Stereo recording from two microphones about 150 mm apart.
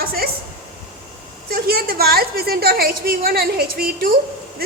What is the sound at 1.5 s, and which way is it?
A woman's voice, 90° right.